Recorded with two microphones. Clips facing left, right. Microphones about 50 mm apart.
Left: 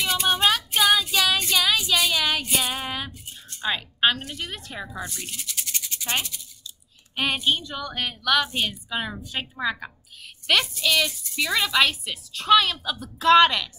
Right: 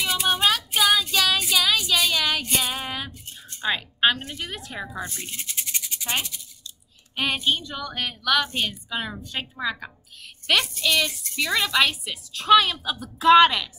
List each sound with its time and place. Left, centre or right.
0.0 s child singing: centre
3.6 s a woman's voice: centre
4.9 s speech: right
7.3 s a woman's voice: centre
7.6 s a woman's voice: centre